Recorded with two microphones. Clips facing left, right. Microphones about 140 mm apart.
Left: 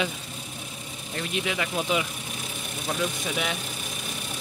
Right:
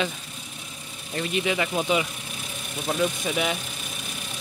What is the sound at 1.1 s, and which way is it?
Speech, centre (ahead or behind).